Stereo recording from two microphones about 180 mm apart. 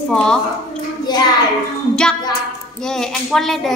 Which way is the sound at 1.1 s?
20° left (ahead or behind).